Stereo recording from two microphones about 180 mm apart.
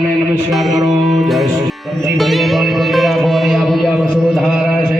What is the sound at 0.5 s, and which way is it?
Music, centre (ahead or behind).